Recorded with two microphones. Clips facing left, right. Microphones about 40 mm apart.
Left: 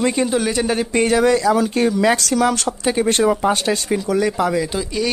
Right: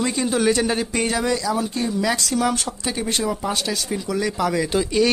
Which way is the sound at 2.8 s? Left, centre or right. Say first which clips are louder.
Left 8 dB; left.